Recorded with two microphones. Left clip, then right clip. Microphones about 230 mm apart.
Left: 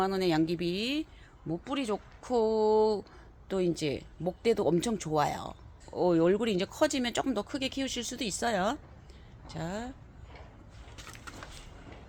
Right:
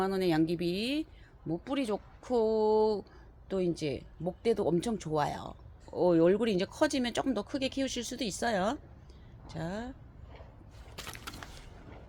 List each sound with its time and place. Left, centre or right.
0.0 s speech: centre
10.9 s vehicle: centre